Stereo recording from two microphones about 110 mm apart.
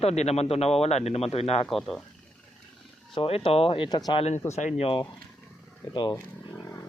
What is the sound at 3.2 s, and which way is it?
Speech, 60° left (ahead or behind).